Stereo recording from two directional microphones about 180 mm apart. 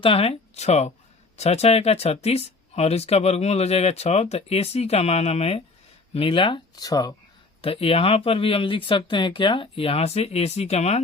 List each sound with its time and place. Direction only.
0.0 s speech: 30° left (ahead or behind)
7.6 s speech: 30° left (ahead or behind)